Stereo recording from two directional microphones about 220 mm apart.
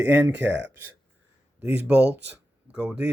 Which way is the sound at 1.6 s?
10° right (ahead or behind).